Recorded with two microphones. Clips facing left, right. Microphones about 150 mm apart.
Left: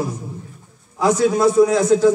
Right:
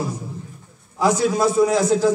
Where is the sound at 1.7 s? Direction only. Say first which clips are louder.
Left 3 dB; 20° left (ahead or behind).